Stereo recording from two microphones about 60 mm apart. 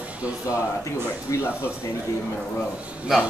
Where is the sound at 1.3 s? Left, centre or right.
Left.